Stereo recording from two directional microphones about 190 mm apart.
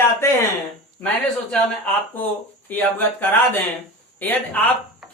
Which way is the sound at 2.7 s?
10° left (ahead or behind).